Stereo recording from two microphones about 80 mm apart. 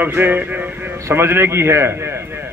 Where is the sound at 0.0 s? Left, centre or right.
Right.